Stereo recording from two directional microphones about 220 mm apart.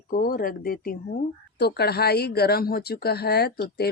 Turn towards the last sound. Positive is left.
turn(degrees=45)  # may be behind; listen again after turning